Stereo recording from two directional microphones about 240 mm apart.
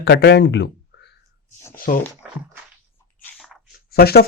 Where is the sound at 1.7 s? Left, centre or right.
Left.